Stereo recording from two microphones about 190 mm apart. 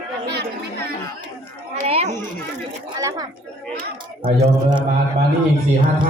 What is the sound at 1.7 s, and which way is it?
Speech, 35° right (ahead or behind).